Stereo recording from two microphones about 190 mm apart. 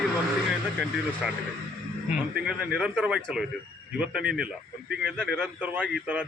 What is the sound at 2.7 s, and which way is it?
Speech, 5° right (ahead or behind).